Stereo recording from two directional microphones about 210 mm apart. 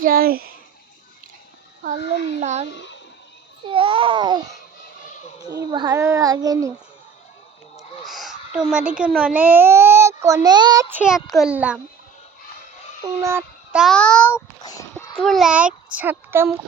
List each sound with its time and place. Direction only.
0.0 s speech: 45° right (ahead or behind)
2.4 s a child's voice: 35° right (ahead or behind)
3.7 s a child's voice: 25° right (ahead or behind)
5.5 s a child's voice: 20° right (ahead or behind)
7.8 s a sound: centre (ahead or behind)
9.0 s a child's voice: 5° right (ahead or behind)
13.1 s a child's voice: 15° right (ahead or behind)
13.7 s a child's voice: centre (ahead or behind)
15.2 s a child's voice: centre (ahead or behind)